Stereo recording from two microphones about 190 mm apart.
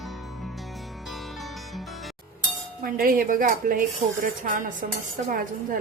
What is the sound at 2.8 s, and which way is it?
Speech, 50° right (ahead or behind).